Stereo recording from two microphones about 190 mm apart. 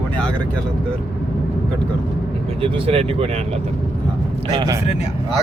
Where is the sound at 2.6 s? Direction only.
30° right (ahead or behind).